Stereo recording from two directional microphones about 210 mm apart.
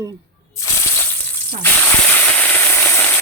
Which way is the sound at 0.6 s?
15° left (ahead or behind).